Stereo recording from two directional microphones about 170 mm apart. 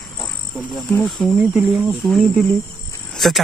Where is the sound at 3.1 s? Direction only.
Centre (ahead or behind).